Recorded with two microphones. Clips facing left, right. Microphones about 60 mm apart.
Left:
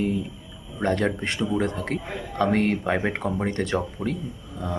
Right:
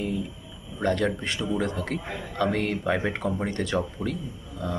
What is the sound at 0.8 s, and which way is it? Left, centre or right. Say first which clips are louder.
Speech: left 1 dB; left.